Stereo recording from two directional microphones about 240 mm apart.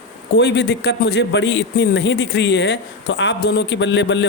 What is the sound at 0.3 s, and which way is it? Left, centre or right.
A man's voice, left.